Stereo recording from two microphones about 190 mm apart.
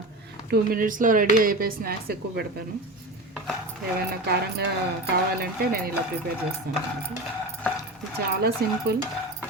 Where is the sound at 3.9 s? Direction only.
55° right (ahead or behind).